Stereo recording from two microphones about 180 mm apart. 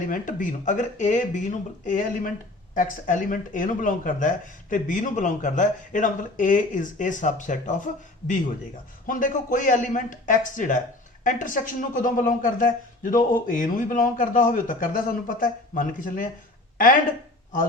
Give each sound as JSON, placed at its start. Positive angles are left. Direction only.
{"t": 0.1, "sound": "speech", "side_deg": 45}
{"t": 9.0, "sound": "speech", "side_deg": 45}